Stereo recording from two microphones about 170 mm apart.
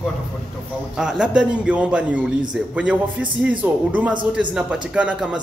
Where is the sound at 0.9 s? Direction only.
5° right (ahead or behind).